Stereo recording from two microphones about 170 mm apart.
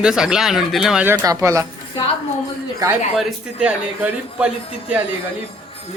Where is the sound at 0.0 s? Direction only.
5° right (ahead or behind).